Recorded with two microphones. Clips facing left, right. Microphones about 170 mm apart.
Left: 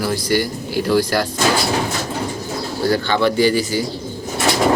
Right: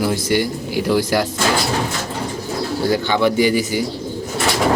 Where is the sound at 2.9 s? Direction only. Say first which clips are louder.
Even; 15° right (ahead or behind).